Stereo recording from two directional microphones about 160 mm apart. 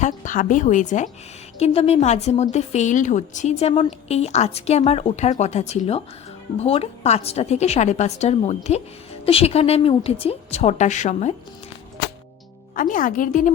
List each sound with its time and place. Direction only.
0.0 s a woman's voice: 55° left (ahead or behind)
1.5 s a woman's voice: 40° left (ahead or behind)
12.7 s speech: 55° left (ahead or behind)